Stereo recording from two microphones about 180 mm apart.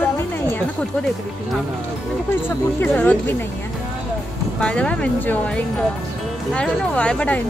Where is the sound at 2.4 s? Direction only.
10° left (ahead or behind).